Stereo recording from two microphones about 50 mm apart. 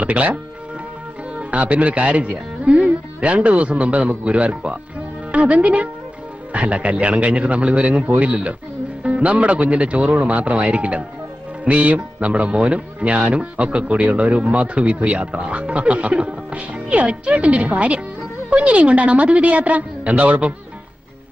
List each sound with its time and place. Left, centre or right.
0.0 s speech: right
1.4 s speech: right